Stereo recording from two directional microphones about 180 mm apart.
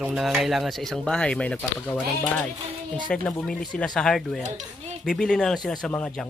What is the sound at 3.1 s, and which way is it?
Speech, 5° left (ahead or behind).